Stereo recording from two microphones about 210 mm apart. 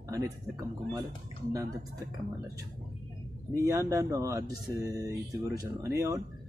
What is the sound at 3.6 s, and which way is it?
Speech, 15° right (ahead or behind).